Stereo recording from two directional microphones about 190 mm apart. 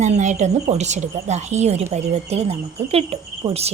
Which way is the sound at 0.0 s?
40° right (ahead or behind).